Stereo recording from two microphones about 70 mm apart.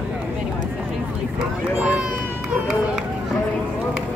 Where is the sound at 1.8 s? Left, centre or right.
Centre.